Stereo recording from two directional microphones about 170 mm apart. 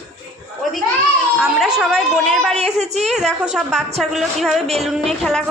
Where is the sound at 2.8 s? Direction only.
40° right (ahead or behind).